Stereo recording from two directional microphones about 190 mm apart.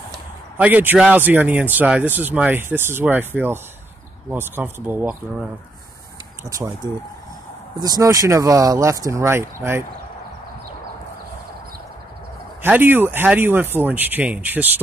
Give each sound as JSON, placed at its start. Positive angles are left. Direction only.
{"t": 0.6, "sound": "speech", "side_deg": -10}
{"t": 12.6, "sound": "speech", "side_deg": -10}